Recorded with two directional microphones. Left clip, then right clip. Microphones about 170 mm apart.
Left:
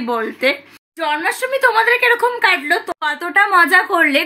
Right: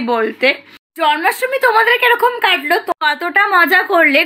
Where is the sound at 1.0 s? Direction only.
25° right (ahead or behind).